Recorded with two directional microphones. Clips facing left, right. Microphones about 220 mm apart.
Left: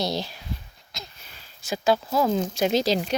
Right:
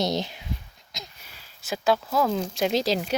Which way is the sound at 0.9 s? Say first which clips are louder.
Even; 20° right (ahead or behind).